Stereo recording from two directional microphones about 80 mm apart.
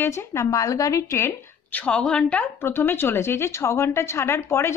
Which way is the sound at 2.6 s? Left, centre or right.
Left.